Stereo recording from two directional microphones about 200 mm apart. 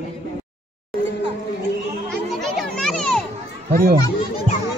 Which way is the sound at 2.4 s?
Centre (ahead or behind).